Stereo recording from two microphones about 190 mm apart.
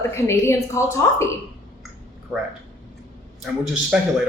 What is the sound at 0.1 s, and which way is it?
Speech, 15° left (ahead or behind).